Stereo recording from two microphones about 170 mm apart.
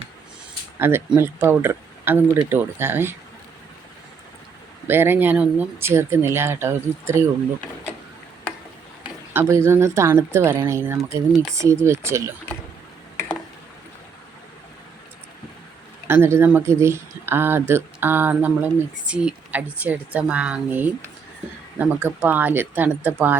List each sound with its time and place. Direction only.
0.8 s speech: 15° right (ahead or behind)
4.9 s speech: 15° right (ahead or behind)
9.3 s speech: 15° right (ahead or behind)
16.0 s speech: 15° right (ahead or behind)